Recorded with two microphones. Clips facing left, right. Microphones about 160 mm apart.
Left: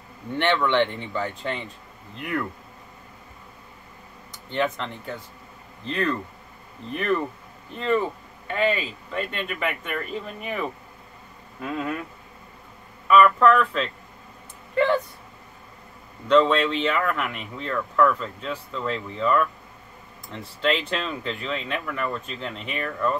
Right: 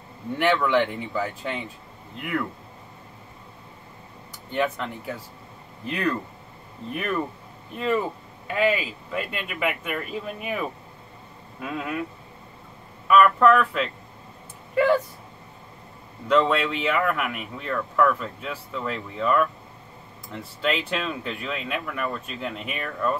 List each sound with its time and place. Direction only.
0.4 s speech: 5° right (ahead or behind)
4.5 s speech: 5° right (ahead or behind)
13.1 s speech: 5° right (ahead or behind)
16.3 s speech: 5° right (ahead or behind)